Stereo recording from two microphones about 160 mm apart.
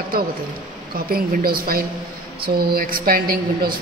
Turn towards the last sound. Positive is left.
turn(degrees=-65)  # may be behind; listen again after turning